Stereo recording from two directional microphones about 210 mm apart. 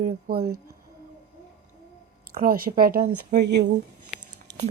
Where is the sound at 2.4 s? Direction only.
45° right (ahead or behind).